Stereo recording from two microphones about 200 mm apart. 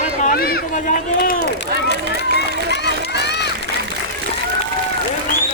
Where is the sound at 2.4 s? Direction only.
55° left (ahead or behind).